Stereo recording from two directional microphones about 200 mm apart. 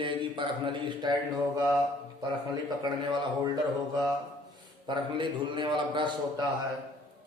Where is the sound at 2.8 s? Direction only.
20° right (ahead or behind).